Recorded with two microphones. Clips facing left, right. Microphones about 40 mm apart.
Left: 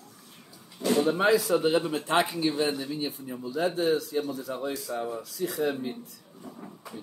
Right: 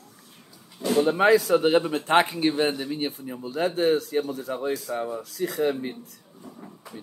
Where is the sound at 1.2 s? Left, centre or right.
Right.